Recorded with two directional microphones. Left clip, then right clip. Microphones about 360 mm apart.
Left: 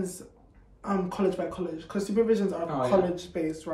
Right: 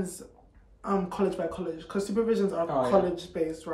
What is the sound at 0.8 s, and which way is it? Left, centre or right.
Speech, centre.